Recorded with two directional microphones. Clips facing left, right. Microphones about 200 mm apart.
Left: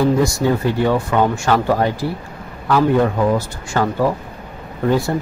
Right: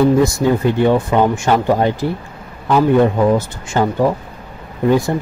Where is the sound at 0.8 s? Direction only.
20° right (ahead or behind).